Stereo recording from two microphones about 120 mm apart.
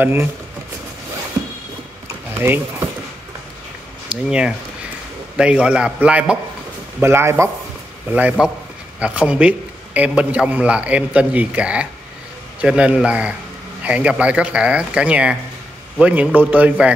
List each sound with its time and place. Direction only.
0.0 s speech: 15° right (ahead or behind)
2.3 s speech: 20° right (ahead or behind)
4.1 s speech: 10° right (ahead or behind)